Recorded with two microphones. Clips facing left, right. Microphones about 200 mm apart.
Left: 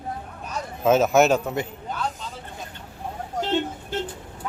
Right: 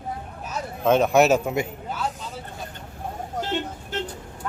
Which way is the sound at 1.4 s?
10° right (ahead or behind).